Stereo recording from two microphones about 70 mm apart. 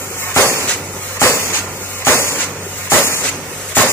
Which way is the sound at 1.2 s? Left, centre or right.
Left.